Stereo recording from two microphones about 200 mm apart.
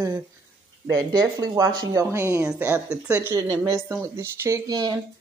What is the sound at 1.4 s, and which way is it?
Speech, 15° right (ahead or behind).